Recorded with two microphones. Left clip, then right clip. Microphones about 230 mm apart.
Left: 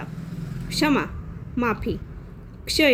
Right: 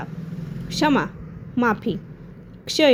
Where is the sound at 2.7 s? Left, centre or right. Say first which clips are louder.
Right 2 dB; centre.